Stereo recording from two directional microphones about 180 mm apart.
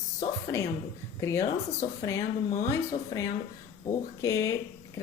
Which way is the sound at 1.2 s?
15° left (ahead or behind).